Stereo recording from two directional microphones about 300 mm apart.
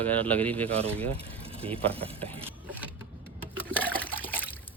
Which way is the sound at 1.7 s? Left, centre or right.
Centre.